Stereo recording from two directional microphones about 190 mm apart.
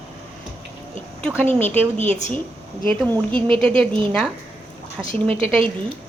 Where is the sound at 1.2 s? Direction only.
10° left (ahead or behind).